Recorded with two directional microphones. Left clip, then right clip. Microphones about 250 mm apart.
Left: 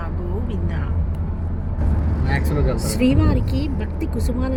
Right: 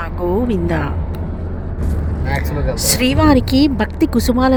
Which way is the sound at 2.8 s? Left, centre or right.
Right.